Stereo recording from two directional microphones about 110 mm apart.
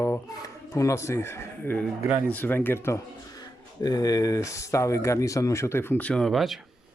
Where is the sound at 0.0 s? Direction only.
25° left (ahead or behind).